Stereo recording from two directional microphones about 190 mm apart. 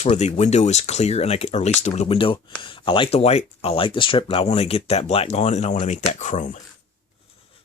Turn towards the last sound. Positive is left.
turn(degrees=40)  # may be behind; listen again after turning